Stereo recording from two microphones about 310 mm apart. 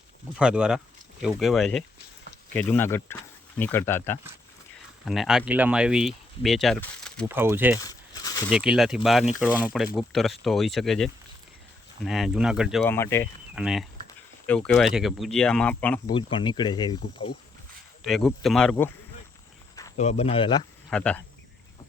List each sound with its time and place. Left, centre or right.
0.3 s speech: centre
7.9 s a sound: centre
8.4 s speech: centre
16.1 s speech: centre
18.0 s speech: centre
20.0 s speech: centre
20.9 s speech: centre